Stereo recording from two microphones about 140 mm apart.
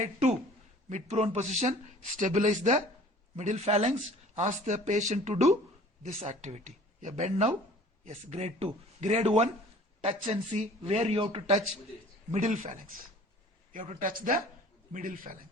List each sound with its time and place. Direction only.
0.0 s speech: 60° right (ahead or behind)
12.3 s speech: 55° right (ahead or behind)
14.1 s a man's voice: 90° right